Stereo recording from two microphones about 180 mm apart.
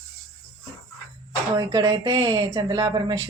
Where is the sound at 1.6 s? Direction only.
20° right (ahead or behind).